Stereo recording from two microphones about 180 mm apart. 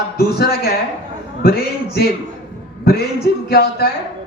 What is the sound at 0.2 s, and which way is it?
A man's voice, 60° left (ahead or behind).